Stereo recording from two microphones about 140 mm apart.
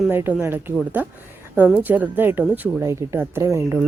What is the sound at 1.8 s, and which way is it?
Speech, 10° right (ahead or behind).